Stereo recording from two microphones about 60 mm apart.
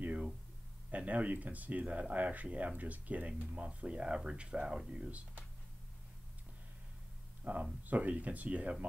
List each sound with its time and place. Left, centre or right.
0.0 s a sound: right
0.9 s speech: right
7.5 s speech: right